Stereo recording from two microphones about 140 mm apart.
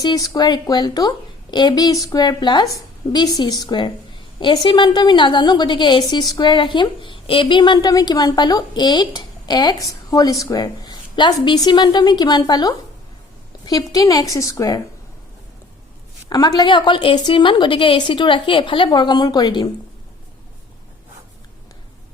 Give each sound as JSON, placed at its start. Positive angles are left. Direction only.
{"t": 0.0, "sound": "a woman's voice", "side_deg": 30}
{"t": 16.3, "sound": "a woman's voice", "side_deg": 30}